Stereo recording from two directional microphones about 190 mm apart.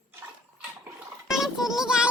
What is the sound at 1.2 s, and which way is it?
Music, centre (ahead or behind).